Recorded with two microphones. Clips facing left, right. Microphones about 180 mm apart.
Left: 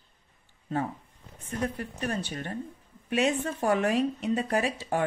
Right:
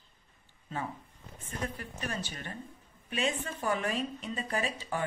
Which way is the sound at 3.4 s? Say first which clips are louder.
Left 7 dB; 40° left (ahead or behind).